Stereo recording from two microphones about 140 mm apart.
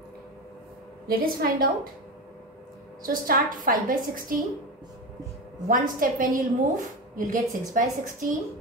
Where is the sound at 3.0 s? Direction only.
85° right.